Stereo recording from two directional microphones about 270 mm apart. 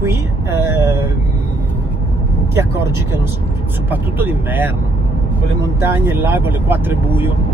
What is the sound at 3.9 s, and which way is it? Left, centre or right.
Speech, centre.